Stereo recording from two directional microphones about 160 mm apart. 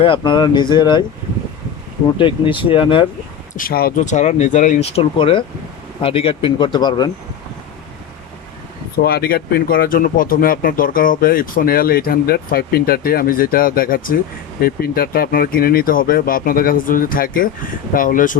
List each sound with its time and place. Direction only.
0.0 s speech: 30° left (ahead or behind)
2.1 s speech: 30° left (ahead or behind)
3.5 s speech: 60° left (ahead or behind)
4.0 s speech: 50° left (ahead or behind); by 7.1 s 25° left (ahead or behind)
9.0 s speech: 75° left (ahead or behind); by 18.3 s 55° left (ahead or behind)